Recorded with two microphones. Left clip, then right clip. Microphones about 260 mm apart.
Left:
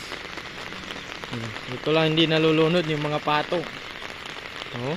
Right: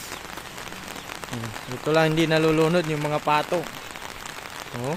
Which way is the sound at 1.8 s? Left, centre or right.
Centre.